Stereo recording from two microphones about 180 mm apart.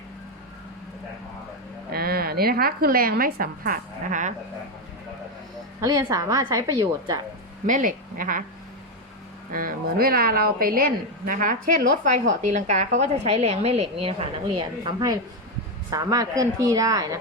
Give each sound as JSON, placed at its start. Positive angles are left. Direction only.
{"t": 1.9, "sound": "a woman's voice", "side_deg": -60}
{"t": 5.8, "sound": "a woman's voice", "side_deg": -20}
{"t": 7.7, "sound": "a woman's voice", "side_deg": -50}
{"t": 9.5, "sound": "a woman's voice", "side_deg": -50}